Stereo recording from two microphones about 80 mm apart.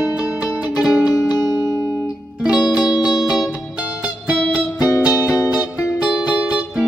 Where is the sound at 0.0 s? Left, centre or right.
Centre.